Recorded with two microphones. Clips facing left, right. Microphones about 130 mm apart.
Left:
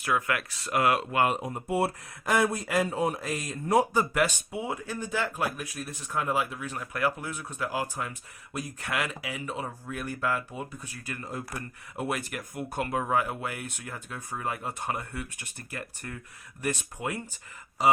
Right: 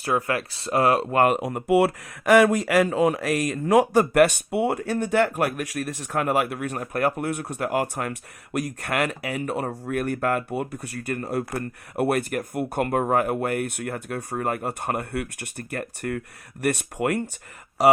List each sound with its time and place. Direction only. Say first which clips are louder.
0.0 s speech: right 4 dB; 35° right (ahead or behind)
1.2 s speech: right 6 dB; 70° right (ahead or behind); by 11.3 s 55° right (ahead or behind)
11.3 s speech: right 10 dB; 70° right (ahead or behind)